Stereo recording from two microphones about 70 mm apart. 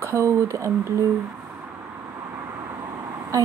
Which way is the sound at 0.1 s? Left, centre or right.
Right.